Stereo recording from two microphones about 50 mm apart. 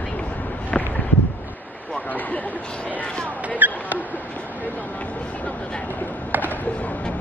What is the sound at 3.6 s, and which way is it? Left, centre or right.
Rodents, right.